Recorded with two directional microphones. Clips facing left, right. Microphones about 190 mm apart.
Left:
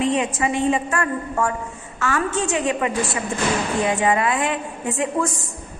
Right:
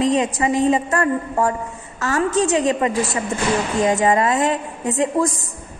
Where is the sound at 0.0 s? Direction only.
35° right (ahead or behind).